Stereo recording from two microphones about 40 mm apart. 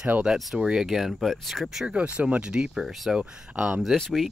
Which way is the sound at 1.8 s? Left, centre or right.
Right.